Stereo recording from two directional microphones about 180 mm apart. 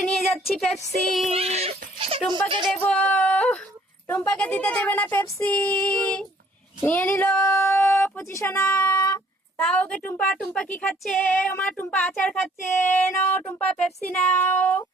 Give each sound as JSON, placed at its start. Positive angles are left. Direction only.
{"t": 0.2, "sound": "speech", "side_deg": 0}
{"t": 1.3, "sound": "speech", "side_deg": -35}
{"t": 2.3, "sound": "music", "side_deg": -25}
{"t": 2.6, "sound": "speech", "side_deg": 5}
{"t": 9.6, "sound": "speech", "side_deg": 5}